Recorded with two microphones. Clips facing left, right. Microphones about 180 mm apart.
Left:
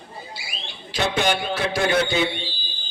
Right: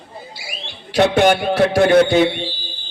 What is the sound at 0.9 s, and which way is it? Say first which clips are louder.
A man's voice: right 9 dB; 65° right (ahead or behind).